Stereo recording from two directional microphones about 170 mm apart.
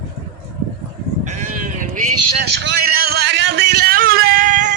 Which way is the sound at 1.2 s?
45° right (ahead or behind).